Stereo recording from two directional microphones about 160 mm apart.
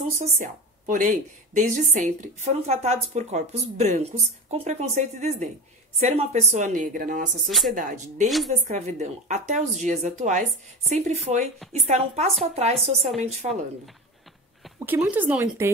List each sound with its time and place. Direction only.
0.2 s speech: 55° right (ahead or behind)
7.4 s speech: centre (ahead or behind)
7.7 s a woman's voice: 55° right (ahead or behind)
14.9 s speech: 10° right (ahead or behind)